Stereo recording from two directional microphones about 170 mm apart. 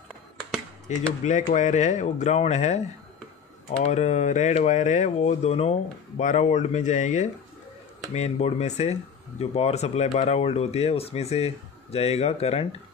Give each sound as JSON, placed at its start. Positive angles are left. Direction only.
{"t": 0.9, "sound": "speech", "side_deg": 45}
{"t": 3.8, "sound": "speech", "side_deg": 40}